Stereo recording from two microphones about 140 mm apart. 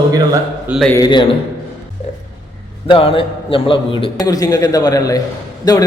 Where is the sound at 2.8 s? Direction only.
40° left (ahead or behind).